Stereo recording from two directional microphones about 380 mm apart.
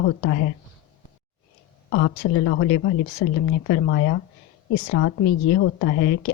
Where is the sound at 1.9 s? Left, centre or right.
Left.